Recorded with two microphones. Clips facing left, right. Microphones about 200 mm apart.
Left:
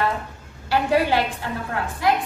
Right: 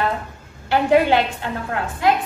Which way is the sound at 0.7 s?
20° right (ahead or behind).